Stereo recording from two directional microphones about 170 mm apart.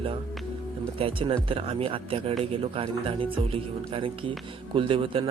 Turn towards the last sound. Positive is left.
turn(degrees=-30)  # may be behind; listen again after turning